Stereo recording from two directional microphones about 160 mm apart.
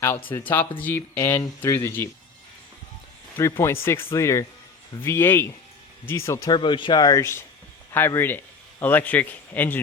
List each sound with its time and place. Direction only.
0.3 s speech: 10° left (ahead or behind)
3.3 s speech: 15° left (ahead or behind)